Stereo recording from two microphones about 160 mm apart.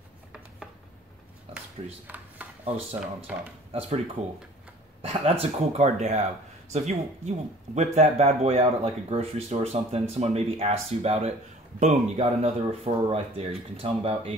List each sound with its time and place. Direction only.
2.0 s a sound: 10° right (ahead or behind)
2.6 s speech: 40° right (ahead or behind)
5.0 s speech: 40° right (ahead or behind)